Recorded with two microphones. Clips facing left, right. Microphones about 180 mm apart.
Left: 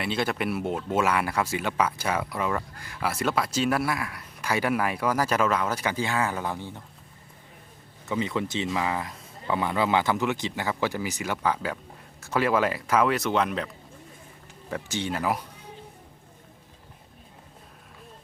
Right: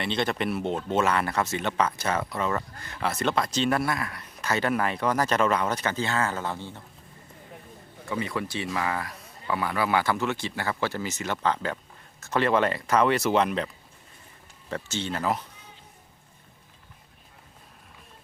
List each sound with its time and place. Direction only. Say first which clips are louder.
0.0 s speech: even; 5° left (ahead or behind)
8.0 s speech: left 2 dB; 20° left (ahead or behind); by 13.7 s centre (ahead or behind)
14.7 s speech: left 1 dB; 15° left (ahead or behind)